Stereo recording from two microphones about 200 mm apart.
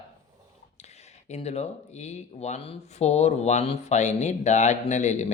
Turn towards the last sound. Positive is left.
turn(degrees=35)  # may be behind; listen again after turning